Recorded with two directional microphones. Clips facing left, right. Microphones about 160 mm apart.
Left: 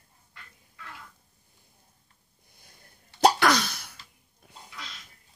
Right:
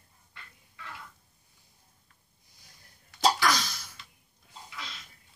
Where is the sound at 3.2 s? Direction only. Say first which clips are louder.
Left 5 dB; 65° left (ahead or behind).